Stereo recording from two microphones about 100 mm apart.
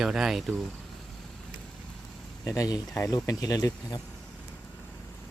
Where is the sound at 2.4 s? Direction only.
30° left (ahead or behind).